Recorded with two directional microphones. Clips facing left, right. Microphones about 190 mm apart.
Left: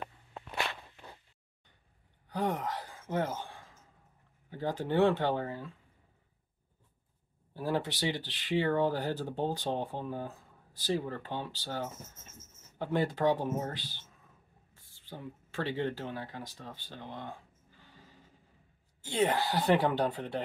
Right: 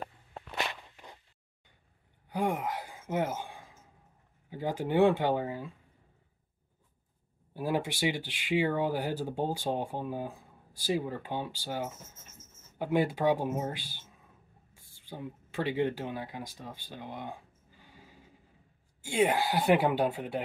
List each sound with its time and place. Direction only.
0.6 s walk: 15° right (ahead or behind)
2.2 s gasp: 10° right (ahead or behind)
4.5 s speech: 10° right (ahead or behind)
7.5 s speech: 15° right (ahead or behind)